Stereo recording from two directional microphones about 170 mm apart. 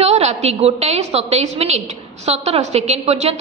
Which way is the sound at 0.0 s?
40° right (ahead or behind).